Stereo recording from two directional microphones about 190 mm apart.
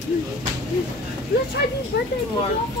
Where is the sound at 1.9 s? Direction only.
60° left (ahead or behind).